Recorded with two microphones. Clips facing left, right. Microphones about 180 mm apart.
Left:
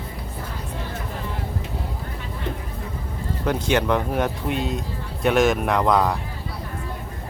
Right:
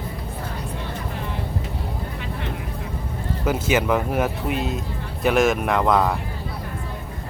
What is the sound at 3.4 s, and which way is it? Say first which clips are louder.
Speech: even; 5° right (ahead or behind).